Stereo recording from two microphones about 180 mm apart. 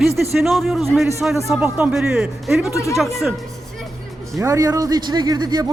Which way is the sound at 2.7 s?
15° left (ahead or behind).